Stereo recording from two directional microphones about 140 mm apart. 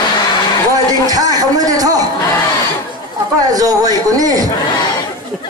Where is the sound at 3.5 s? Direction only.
25° right (ahead or behind).